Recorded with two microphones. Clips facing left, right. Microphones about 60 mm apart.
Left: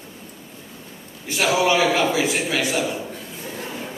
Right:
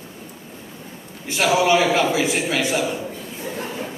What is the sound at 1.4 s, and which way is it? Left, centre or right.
A man's voice, centre.